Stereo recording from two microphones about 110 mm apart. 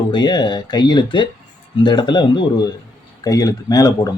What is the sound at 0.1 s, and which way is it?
Speech, 40° left (ahead or behind).